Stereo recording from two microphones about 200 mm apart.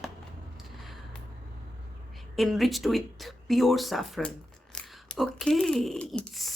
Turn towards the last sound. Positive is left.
turn(degrees=0)  # may be behind; listen again after turning